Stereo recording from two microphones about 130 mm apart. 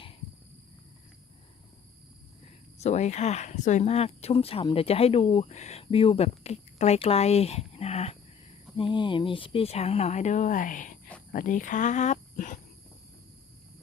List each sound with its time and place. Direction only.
2.7 s speech: 60° left (ahead or behind)
8.7 s speech: 40° left (ahead or behind); by 12.5 s 75° left (ahead or behind)